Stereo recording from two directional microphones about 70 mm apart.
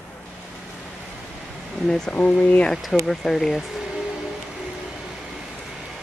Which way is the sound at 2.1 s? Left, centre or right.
Left.